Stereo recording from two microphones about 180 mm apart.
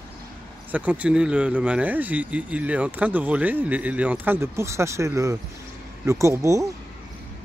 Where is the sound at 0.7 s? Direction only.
10° right (ahead or behind).